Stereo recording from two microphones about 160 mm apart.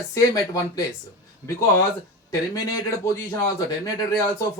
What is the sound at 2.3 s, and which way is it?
Speech, 20° left (ahead or behind).